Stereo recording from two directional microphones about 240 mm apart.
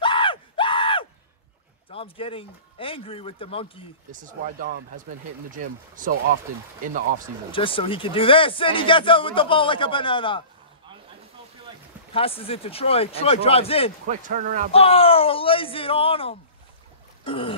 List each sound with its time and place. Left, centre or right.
0.0 s screaming: left
1.9 s speech: left
4.1 s speech: right
7.5 s speech: left
12.1 s speech: left
14.0 s speech: right
14.7 s speech: left
17.2 s boat: left